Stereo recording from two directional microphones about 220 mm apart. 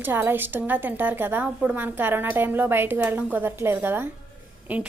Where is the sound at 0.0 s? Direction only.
10° right (ahead or behind).